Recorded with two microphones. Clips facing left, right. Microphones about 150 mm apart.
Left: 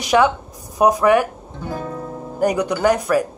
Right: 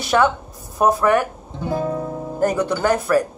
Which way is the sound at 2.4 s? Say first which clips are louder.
Left 2 dB; 15° left (ahead or behind).